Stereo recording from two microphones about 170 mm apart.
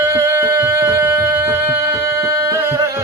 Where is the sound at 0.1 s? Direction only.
20° right (ahead or behind).